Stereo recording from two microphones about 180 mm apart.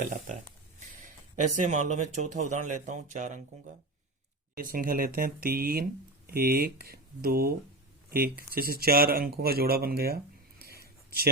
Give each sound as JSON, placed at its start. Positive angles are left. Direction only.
{"t": 0.0, "sound": "speech", "side_deg": -45}
{"t": 4.5, "sound": "speech", "side_deg": -50}
{"t": 10.6, "sound": "a sound", "side_deg": -60}